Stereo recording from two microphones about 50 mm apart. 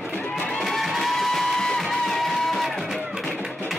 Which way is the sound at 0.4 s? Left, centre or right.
Centre.